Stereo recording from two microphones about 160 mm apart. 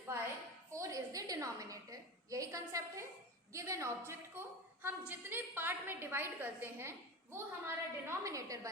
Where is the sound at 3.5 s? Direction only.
20° right (ahead or behind).